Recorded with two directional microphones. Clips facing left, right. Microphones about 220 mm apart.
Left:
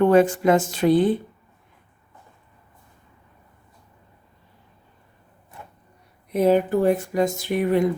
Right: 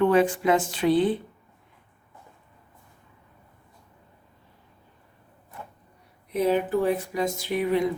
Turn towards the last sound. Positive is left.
turn(degrees=50)  # may be behind; listen again after turning